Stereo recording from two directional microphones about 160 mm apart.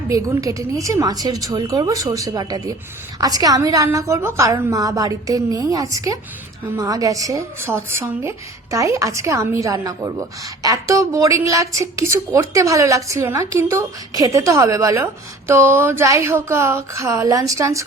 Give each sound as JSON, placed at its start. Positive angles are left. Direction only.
{"t": 0.1, "sound": "a woman's voice", "side_deg": -20}